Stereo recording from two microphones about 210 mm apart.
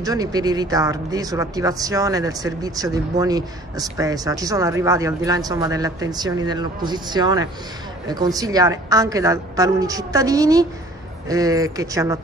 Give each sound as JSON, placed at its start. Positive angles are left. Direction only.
{"t": 0.0, "sound": "speech", "side_deg": -15}